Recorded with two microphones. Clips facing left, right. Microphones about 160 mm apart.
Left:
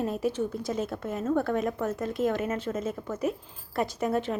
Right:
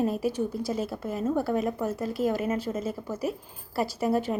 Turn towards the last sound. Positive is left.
turn(degrees=-10)  # may be behind; listen again after turning